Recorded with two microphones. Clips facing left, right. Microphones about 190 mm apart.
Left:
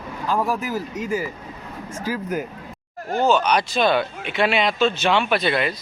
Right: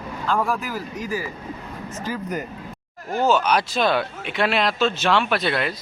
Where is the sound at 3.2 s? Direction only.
5° right (ahead or behind).